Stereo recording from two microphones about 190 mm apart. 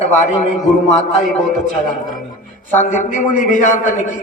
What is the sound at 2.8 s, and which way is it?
A man's voice, 40° left (ahead or behind).